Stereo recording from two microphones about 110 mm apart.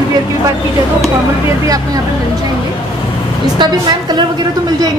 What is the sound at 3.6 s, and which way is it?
Speech, 40° right (ahead or behind).